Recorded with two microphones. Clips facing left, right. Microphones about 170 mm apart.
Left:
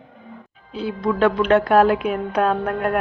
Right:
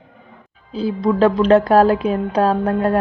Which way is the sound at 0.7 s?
35° right (ahead or behind).